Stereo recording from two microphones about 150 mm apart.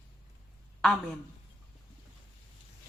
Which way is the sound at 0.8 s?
5° left (ahead or behind).